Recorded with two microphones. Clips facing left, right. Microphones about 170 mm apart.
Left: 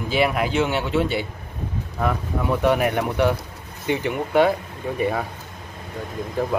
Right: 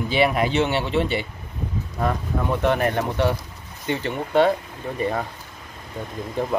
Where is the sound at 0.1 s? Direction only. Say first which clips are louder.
Even; 5° left (ahead or behind).